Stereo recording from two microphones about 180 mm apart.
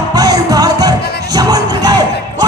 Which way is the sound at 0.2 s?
20° right (ahead or behind).